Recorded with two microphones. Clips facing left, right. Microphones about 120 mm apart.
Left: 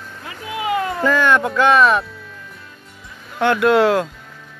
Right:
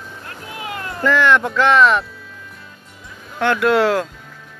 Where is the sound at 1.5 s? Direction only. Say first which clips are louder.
Left 1 dB; 20° left (ahead or behind).